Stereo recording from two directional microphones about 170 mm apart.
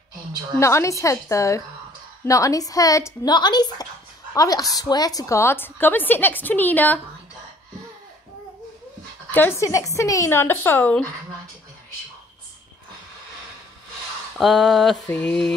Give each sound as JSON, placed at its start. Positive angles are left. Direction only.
{"t": 0.6, "sound": "a woman's voice", "side_deg": 15}
{"t": 9.3, "sound": "a woman's voice", "side_deg": 15}
{"t": 14.4, "sound": "a sound", "side_deg": 0}